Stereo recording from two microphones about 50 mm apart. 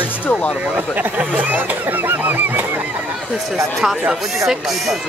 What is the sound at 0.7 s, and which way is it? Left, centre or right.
Speech, right.